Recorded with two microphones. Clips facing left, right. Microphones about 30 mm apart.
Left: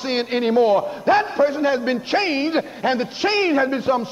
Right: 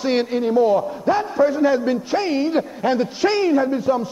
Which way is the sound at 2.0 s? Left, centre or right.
Left.